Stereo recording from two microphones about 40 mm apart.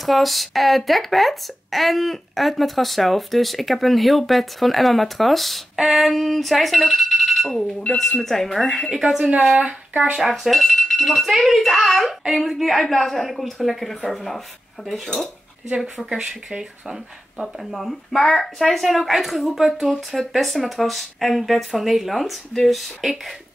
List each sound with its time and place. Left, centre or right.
0.0 s speech: centre
7.4 s speech: centre
9.3 s speech: right
10.3 s speech: centre
16.1 s speech: centre